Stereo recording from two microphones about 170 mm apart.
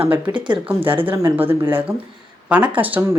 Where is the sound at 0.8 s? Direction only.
10° right (ahead or behind).